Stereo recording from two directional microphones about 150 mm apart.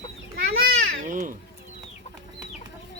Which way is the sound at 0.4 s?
65° right (ahead or behind).